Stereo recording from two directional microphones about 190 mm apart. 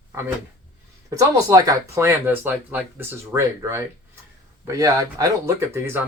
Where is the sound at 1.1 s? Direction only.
20° right (ahead or behind).